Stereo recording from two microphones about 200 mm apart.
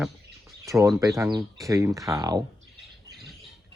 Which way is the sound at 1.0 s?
15° right (ahead or behind).